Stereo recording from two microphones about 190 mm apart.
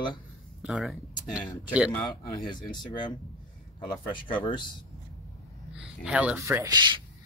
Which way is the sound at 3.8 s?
25° left (ahead or behind).